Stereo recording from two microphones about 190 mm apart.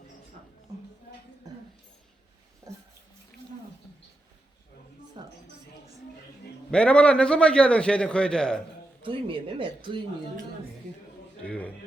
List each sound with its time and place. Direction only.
5.2 s a sound: 25° right (ahead or behind)
6.7 s a man's voice: 5° left (ahead or behind)
9.0 s speech: 25° right (ahead or behind)
11.4 s a man's voice: 5° left (ahead or behind)